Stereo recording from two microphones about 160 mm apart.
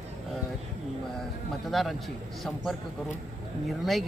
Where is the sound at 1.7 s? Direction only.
Centre (ahead or behind).